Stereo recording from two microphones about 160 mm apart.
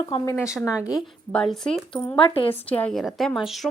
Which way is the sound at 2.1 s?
35° left (ahead or behind).